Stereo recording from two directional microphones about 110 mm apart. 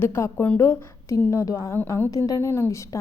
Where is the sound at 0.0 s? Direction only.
20° left (ahead or behind).